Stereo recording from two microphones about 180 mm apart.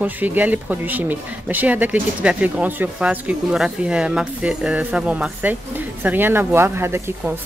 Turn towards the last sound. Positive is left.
turn(degrees=-15)  # may be behind; listen again after turning